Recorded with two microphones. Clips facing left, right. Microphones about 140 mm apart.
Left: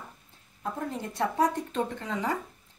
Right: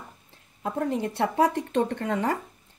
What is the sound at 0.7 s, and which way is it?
Speech, 85° right.